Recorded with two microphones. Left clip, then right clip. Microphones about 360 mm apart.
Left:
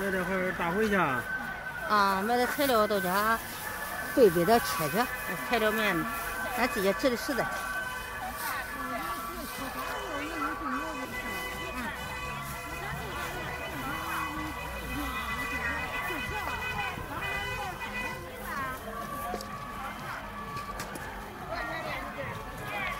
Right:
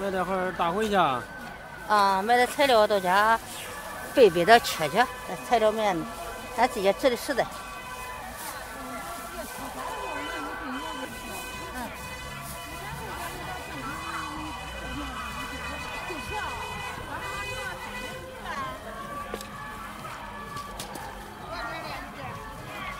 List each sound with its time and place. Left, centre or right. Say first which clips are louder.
0.3 s speech: right 3 dB; centre
1.9 s speech: right 4 dB; right
4.4 s speech: right 6 dB; right